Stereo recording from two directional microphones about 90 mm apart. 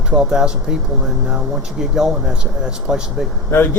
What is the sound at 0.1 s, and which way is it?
Speech, 10° right (ahead or behind).